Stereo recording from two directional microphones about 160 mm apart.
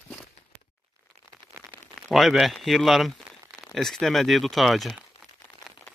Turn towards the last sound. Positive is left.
turn(degrees=0)  # may be behind; listen again after turning